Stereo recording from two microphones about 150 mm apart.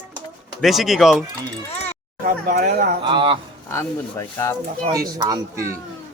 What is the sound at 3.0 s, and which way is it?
Speech, 35° right (ahead or behind).